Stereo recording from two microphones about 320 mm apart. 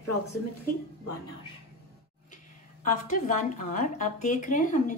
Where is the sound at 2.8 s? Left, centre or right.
Left.